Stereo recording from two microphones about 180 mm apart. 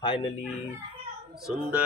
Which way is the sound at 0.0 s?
25° left (ahead or behind).